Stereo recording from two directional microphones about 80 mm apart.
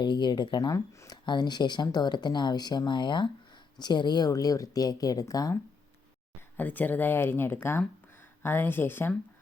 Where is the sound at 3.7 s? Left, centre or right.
Left.